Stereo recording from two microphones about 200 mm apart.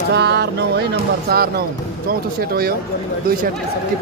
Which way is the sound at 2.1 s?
50° right (ahead or behind).